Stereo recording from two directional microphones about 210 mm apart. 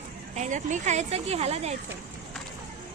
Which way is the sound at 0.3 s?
35° right (ahead or behind).